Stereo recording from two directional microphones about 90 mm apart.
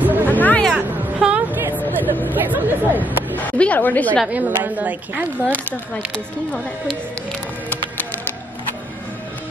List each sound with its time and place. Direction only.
0.0 s music: 20° right (ahead or behind)
0.3 s music: 20° left (ahead or behind)
0.7 s music: 15° right (ahead or behind)
2.0 s a sound: 20° left (ahead or behind)
2.3 s chatter: 20° right (ahead or behind)
3.3 s a sound: 15° left (ahead or behind)
4.3 s a woman's voice: 20° right (ahead or behind)
5.5 s speech: 15° left (ahead or behind)